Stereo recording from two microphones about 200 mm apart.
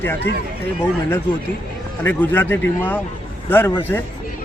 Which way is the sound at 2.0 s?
10° left (ahead or behind).